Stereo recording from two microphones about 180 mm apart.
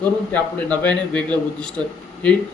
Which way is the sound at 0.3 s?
10° left (ahead or behind).